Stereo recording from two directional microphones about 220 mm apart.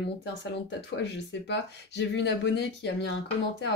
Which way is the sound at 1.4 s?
50° left (ahead or behind).